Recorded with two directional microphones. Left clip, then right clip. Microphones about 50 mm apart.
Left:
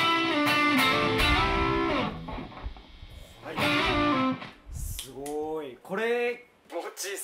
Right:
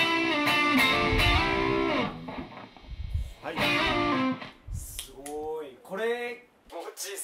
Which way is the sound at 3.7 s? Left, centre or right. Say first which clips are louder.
Left 1 dB; right.